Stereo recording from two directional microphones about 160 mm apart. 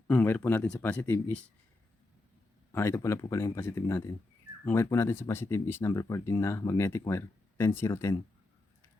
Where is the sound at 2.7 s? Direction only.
15° left (ahead or behind).